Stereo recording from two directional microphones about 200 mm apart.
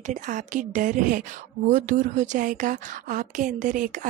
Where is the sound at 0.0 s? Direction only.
40° right (ahead or behind).